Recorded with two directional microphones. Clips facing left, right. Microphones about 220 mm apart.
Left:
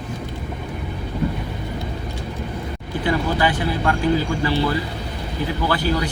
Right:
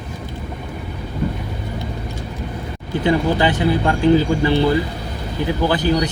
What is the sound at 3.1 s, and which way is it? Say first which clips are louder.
Speech: right 4 dB; 20° right (ahead or behind).